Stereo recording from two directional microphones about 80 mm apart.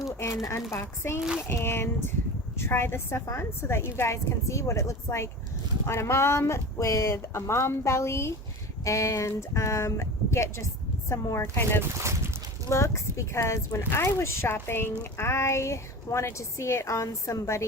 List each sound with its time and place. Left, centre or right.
0.7 s a woman's voice: left
1.2 s speech: centre
1.5 s a woman's voice: left
11.4 s speech: left
11.8 s speech: right
12.7 s a woman's voice: left